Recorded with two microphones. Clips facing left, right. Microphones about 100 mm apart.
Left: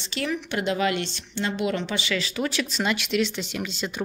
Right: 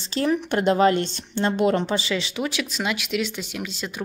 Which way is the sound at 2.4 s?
10° right (ahead or behind).